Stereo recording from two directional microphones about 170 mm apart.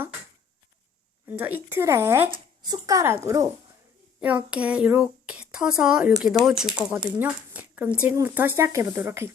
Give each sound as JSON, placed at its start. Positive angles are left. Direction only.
{"t": 1.3, "sound": "speech", "side_deg": -10}
{"t": 2.3, "sound": "speech", "side_deg": -25}
{"t": 4.2, "sound": "speech", "side_deg": -10}